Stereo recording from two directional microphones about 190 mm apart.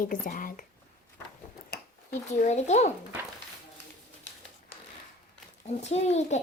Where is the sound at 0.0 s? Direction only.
45° left (ahead or behind).